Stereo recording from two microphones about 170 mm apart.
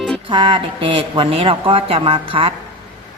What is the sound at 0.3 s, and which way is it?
Speech, 30° right (ahead or behind).